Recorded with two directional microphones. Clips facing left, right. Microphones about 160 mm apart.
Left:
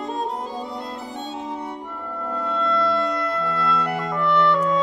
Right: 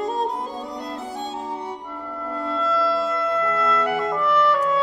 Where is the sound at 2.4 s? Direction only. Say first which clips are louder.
Even; 5° right (ahead or behind).